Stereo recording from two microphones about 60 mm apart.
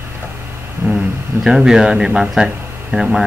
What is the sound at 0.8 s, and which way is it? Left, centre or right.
Speech, right.